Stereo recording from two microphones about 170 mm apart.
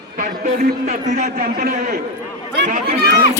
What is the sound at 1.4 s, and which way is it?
A man's voice, 60° right (ahead or behind).